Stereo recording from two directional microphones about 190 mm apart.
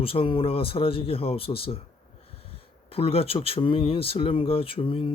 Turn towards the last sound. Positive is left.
turn(degrees=25)  # may be behind; listen again after turning